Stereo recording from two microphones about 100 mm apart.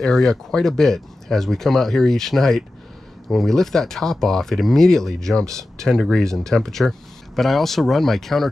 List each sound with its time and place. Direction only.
0.0 s speech: 5° left (ahead or behind)